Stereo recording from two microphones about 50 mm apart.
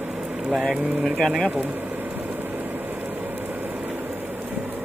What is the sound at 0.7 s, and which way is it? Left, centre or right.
Speech, centre.